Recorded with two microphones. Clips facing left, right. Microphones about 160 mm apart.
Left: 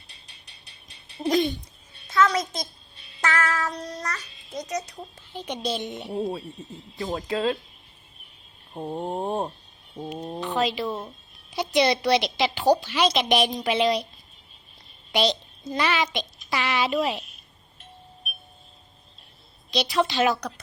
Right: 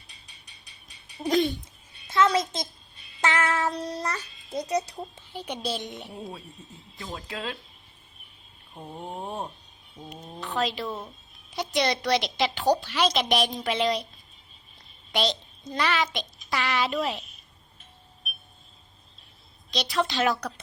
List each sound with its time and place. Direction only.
1.3 s a woman's voice: centre (ahead or behind)
2.1 s a sound: 25° right (ahead or behind)
3.2 s a child's voice: 25° right (ahead or behind)
4.9 s speech: 10° right (ahead or behind)
6.1 s speech: 35° left (ahead or behind)
8.7 s speech: 45° left (ahead or behind)
10.4 s a woman's voice: centre (ahead or behind)
15.1 s a child's voice: centre (ahead or behind)
19.7 s a woman's voice: 5° left (ahead or behind)